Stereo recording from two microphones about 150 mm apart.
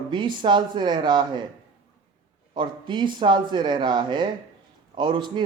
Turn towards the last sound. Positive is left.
turn(degrees=-30)  # may be behind; listen again after turning